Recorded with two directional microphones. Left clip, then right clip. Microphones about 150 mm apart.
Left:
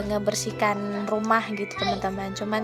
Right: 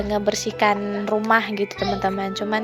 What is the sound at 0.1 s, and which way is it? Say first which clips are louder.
A woman's voice: right 3 dB; 20° right (ahead or behind).